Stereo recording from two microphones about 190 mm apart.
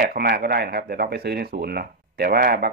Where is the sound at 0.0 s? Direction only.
55° right (ahead or behind).